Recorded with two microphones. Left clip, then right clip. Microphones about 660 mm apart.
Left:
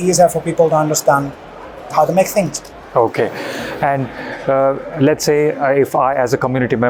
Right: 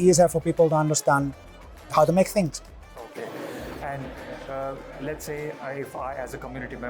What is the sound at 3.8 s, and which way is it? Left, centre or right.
Speech, left.